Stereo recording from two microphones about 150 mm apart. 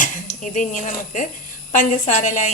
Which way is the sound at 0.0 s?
60° left (ahead or behind).